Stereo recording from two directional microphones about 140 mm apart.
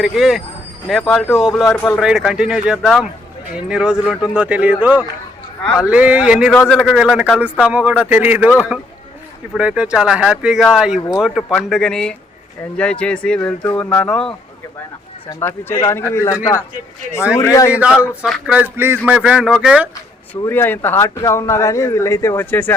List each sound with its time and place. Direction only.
0.0 s speech: centre (ahead or behind)
1.7 s speech: 15° left (ahead or behind)
2.0 s speech: centre (ahead or behind)
6.5 s speech: 10° left (ahead or behind)
6.9 s speech: 5° right (ahead or behind)
9.6 s speech: 5° right (ahead or behind)
15.3 s speech: 20° left (ahead or behind)
18.2 s speech: 5° right (ahead or behind)
20.5 s speech: 15° left (ahead or behind)